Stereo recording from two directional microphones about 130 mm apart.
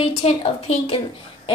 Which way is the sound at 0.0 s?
45° left (ahead or behind).